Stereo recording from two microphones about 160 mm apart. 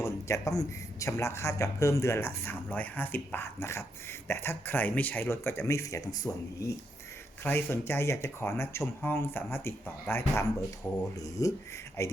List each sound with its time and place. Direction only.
0.0 s a man's voice: 20° left (ahead or behind)